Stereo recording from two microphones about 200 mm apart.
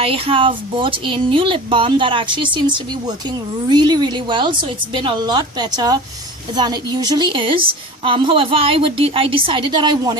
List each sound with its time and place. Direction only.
0.0 s speech: 25° right (ahead or behind)